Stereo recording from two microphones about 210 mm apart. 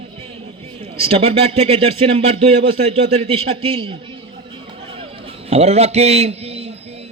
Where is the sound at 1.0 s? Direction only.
25° right (ahead or behind).